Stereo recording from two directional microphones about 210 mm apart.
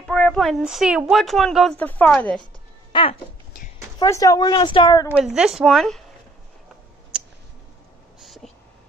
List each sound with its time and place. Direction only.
0.0 s speech: 5° left (ahead or behind)
2.9 s music: 25° left (ahead or behind)
4.0 s speech: 15° left (ahead or behind)
5.1 s speech: 5° right (ahead or behind)
8.2 s a sound: centre (ahead or behind)